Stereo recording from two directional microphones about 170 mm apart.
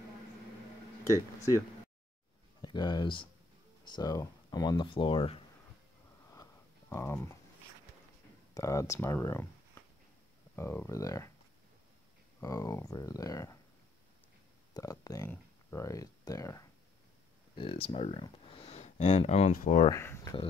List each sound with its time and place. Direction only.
1.0 s speech: 15° left (ahead or behind)
2.6 s speech: 25° left (ahead or behind)
6.3 s a sound: 20° left (ahead or behind)
8.5 s speech: 20° left (ahead or behind)
10.5 s speech: 15° left (ahead or behind)
12.4 s speech: 20° left (ahead or behind)
14.7 s speech: 20° left (ahead or behind)
17.6 s speech: 30° left (ahead or behind); by 19.9 s 50° left (ahead or behind)
19.9 s speech: 15° left (ahead or behind)